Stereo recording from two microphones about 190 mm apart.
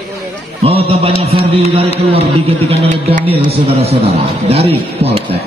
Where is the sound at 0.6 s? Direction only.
30° right (ahead or behind).